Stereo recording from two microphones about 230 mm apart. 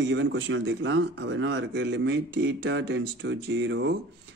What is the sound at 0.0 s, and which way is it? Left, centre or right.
A man's voice, right.